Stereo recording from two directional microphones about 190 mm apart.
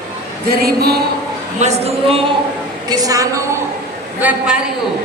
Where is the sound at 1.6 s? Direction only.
35° right (ahead or behind).